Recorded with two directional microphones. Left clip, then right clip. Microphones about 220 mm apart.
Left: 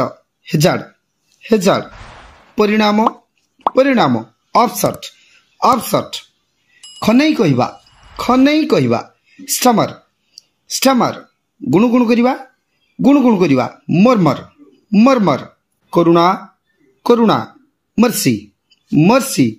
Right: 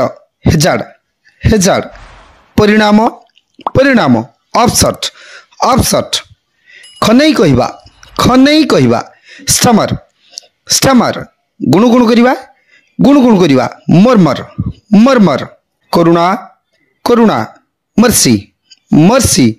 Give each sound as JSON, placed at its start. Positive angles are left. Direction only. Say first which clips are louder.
{"t": 0.0, "sound": "speech", "louder": "right 7 dB", "side_deg": -50}